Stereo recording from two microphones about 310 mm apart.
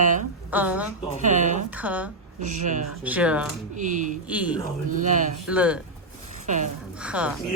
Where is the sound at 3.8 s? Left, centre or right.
Right.